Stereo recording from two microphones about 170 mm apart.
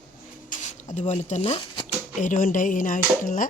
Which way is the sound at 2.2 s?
50° left (ahead or behind).